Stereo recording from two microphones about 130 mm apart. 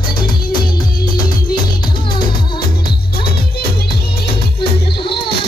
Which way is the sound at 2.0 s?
40° left (ahead or behind).